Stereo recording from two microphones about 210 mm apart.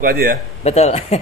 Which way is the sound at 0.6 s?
30° left (ahead or behind).